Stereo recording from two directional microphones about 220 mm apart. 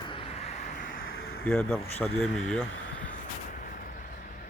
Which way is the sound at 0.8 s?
50° left (ahead or behind).